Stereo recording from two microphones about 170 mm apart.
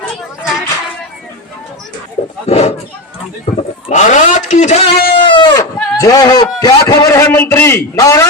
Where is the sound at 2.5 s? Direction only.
40° left (ahead or behind).